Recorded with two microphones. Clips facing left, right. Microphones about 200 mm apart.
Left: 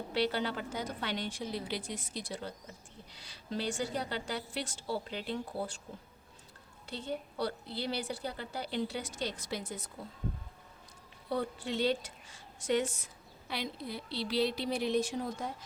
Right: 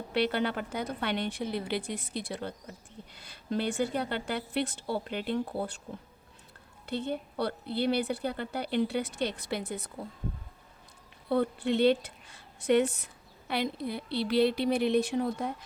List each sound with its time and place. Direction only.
0.1 s a woman's voice: 60° right (ahead or behind)
6.8 s a woman's voice: 60° right (ahead or behind)
11.3 s a woman's voice: 60° right (ahead or behind)